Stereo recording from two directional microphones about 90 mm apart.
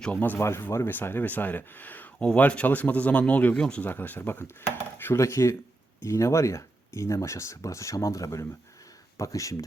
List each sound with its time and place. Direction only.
0.0 s speech: 20° left (ahead or behind)
0.3 s speech: 30° left (ahead or behind)